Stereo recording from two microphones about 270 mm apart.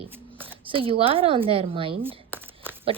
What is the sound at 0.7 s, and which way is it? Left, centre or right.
Speech, centre.